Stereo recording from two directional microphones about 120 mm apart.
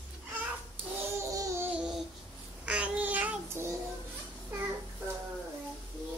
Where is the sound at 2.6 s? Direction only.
10° right (ahead or behind).